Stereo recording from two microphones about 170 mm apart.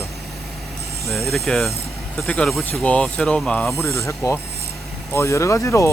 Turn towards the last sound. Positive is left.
turn(degrees=15)  # may be behind; listen again after turning